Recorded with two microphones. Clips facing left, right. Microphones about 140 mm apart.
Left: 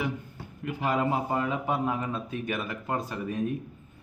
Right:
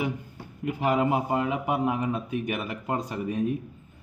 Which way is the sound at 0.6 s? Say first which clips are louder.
Right 3 dB; 20° right (ahead or behind).